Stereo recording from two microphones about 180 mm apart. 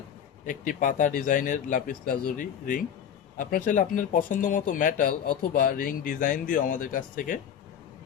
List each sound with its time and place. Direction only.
0.4 s speech: 45° left (ahead or behind)